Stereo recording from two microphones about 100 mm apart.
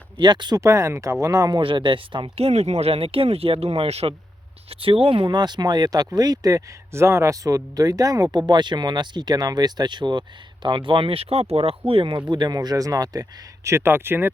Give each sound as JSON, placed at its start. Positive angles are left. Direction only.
{"t": 0.2, "sound": "speech", "side_deg": -50}
{"t": 0.6, "sound": "speech", "side_deg": -30}
{"t": 1.6, "sound": "speech", "side_deg": -55}
{"t": 4.7, "sound": "speech", "side_deg": -70}
{"t": 11.9, "sound": "speech", "side_deg": -60}
{"t": 12.5, "sound": "speech", "side_deg": -35}
{"t": 13.7, "sound": "speech", "side_deg": -25}